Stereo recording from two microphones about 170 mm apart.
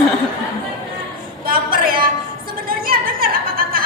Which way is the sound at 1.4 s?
55° right (ahead or behind).